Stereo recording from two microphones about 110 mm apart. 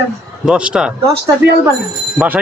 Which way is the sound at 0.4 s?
5° right (ahead or behind).